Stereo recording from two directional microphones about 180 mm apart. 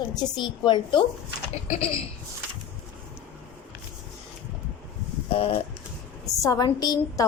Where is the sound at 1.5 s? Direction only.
35° left (ahead or behind).